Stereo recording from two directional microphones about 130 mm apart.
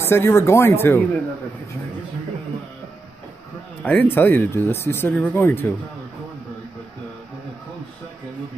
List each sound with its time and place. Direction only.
0.0 s speech: 20° left (ahead or behind)
3.8 s speech: 10° left (ahead or behind)